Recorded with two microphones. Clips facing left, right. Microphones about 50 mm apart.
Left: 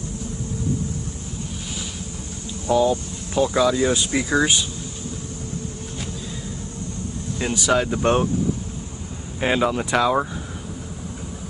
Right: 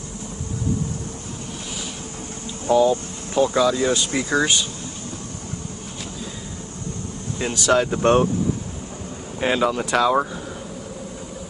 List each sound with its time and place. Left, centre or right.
2.6 s speech: right
3.5 s speech: centre
7.5 s speech: centre
9.4 s speech: centre